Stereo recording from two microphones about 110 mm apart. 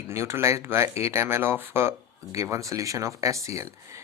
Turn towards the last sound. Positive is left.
turn(degrees=-30)  # may be behind; listen again after turning